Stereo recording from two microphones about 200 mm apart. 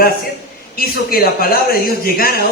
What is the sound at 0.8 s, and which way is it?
A man's voice, 50° left (ahead or behind).